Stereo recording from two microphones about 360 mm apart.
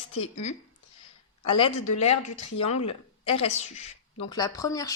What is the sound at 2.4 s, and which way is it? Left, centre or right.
Speech, centre.